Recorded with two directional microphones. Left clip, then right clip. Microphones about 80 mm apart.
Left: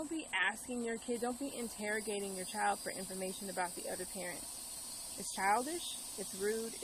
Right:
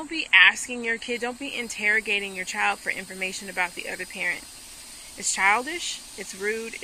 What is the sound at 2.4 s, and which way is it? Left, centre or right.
Speech, centre.